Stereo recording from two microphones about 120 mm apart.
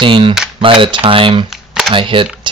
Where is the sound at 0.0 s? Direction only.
45° right (ahead or behind).